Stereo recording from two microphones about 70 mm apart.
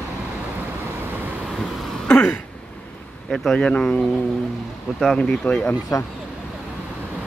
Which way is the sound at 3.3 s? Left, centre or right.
Centre.